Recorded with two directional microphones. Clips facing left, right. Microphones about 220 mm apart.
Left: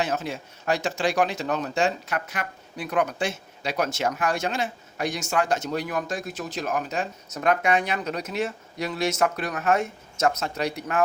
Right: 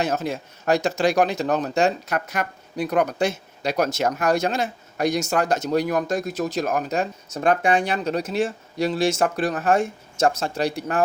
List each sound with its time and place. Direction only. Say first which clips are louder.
0.0 s speech: right 3 dB; 40° right (ahead or behind)